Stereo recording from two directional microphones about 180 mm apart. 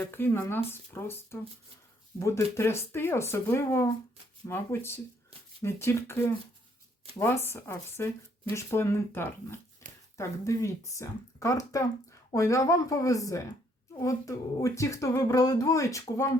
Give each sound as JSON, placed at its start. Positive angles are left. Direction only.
{"t": 0.0, "sound": "speech", "side_deg": 10}
{"t": 9.8, "sound": "a sound", "side_deg": 15}
{"t": 10.2, "sound": "speech", "side_deg": 15}